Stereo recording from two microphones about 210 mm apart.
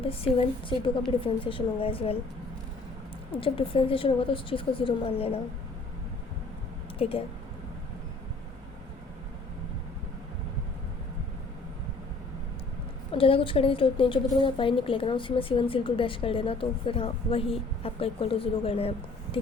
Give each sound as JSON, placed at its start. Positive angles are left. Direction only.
{"t": 0.0, "sound": "a woman's voice", "side_deg": 25}
{"t": 3.3, "sound": "a woman's voice", "side_deg": 25}
{"t": 7.0, "sound": "a woman's voice", "side_deg": 25}
{"t": 13.1, "sound": "a woman's voice", "side_deg": 25}